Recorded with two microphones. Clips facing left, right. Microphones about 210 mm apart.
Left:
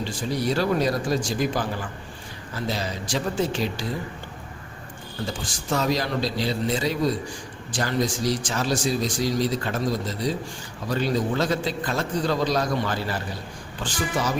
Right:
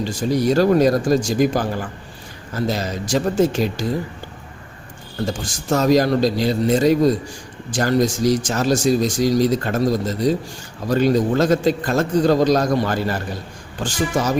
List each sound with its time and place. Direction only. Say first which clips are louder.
0.0 s speech: right 7 dB; 45° right (ahead or behind)
5.2 s speech: right 7 dB; 45° right (ahead or behind)